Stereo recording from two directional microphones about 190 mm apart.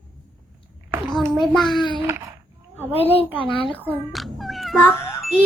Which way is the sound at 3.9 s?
Centre (ahead or behind).